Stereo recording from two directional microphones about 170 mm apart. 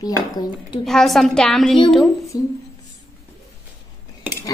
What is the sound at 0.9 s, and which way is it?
Speech, centre (ahead or behind).